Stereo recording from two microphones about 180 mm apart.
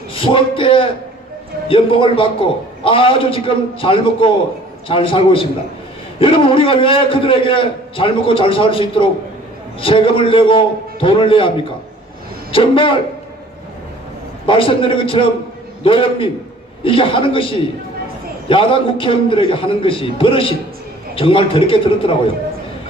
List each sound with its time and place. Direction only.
0.1 s a man's voice: 30° left (ahead or behind)
14.4 s a man's voice: 30° left (ahead or behind)